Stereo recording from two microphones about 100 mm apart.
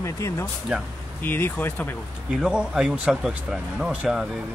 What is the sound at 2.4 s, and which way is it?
A man's voice, 5° right (ahead or behind).